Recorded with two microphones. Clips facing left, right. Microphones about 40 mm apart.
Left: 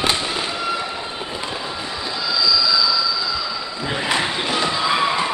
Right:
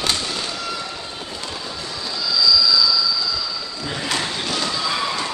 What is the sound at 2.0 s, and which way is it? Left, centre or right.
Train, left.